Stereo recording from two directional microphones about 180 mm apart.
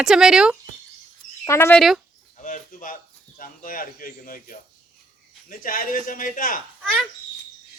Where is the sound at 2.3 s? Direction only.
45° left (ahead or behind).